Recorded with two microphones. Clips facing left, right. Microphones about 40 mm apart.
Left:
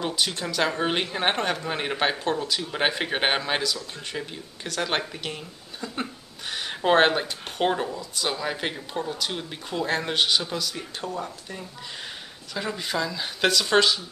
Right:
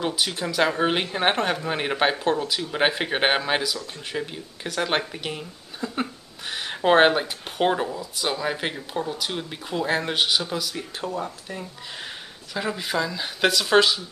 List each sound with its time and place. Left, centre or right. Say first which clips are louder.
0.0 s speech: right 1 dB; centre